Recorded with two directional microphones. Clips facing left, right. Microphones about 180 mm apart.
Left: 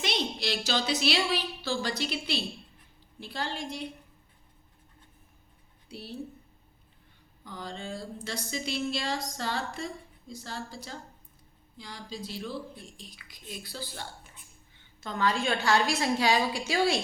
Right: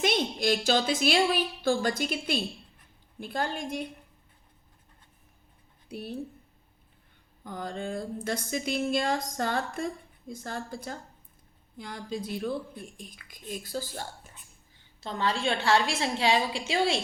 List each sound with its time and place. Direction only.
0.0 s speech: 50° right (ahead or behind)
5.9 s speech: 55° right (ahead or behind)
7.4 s speech: 50° right (ahead or behind)
15.0 s a woman's voice: 30° right (ahead or behind)